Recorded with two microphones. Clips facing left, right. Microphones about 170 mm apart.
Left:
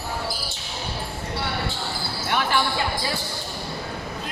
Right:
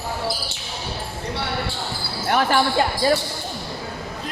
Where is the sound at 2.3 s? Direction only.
45° right (ahead or behind).